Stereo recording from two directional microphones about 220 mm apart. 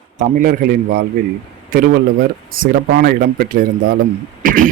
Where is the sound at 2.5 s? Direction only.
40° right (ahead or behind).